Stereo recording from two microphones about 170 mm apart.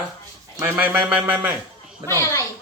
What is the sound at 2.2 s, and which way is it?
Speech, 20° left (ahead or behind).